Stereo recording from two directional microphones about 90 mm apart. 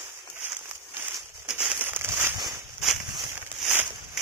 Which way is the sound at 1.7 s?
25° right (ahead or behind).